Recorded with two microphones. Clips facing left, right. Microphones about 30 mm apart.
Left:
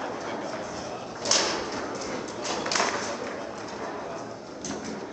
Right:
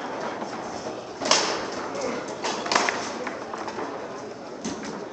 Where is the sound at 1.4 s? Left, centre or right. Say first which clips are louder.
Right 1 dB; centre.